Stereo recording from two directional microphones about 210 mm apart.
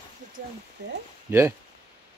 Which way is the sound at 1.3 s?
10° right (ahead or behind).